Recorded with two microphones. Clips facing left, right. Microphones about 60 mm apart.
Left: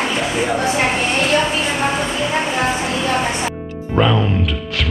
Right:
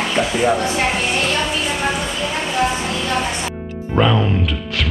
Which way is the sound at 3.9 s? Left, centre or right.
Centre.